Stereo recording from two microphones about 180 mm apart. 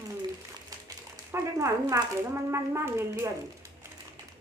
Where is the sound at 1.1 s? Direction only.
15° right (ahead or behind).